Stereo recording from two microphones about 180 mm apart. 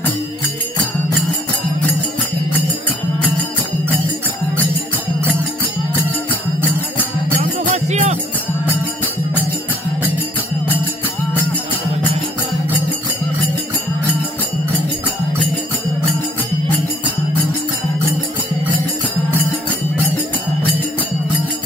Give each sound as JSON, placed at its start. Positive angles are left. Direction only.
{"t": 7.6, "sound": "music", "side_deg": -40}